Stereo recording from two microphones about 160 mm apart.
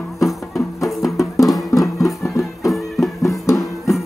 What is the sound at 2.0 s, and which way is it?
Music, 15° left (ahead or behind).